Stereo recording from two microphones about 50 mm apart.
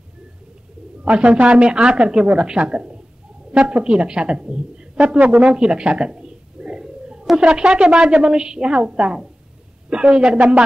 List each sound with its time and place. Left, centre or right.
1.0 s a woman's voice: right
5.2 s speech: right
5.5 s a sound: centre
7.3 s a woman's voice: centre